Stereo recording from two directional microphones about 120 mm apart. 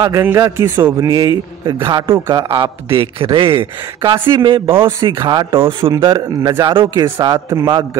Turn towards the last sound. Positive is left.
turn(degrees=-30)  # may be behind; listen again after turning